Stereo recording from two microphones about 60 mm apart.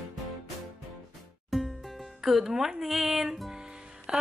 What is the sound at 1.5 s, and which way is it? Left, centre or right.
Music, centre.